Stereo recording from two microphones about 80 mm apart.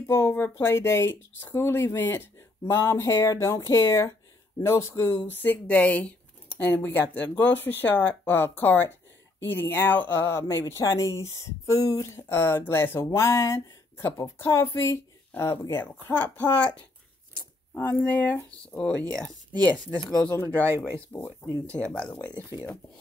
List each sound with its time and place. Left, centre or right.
0.0 s speech: left
10.7 s speech: left
17.7 s speech: left
18.8 s speech: centre